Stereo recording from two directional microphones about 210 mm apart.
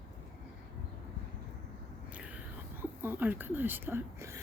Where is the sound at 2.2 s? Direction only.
10° right (ahead or behind).